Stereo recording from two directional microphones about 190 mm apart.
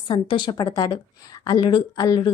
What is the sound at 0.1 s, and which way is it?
A woman's voice, 25° left (ahead or behind).